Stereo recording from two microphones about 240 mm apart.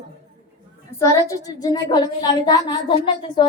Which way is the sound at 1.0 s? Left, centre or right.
Centre.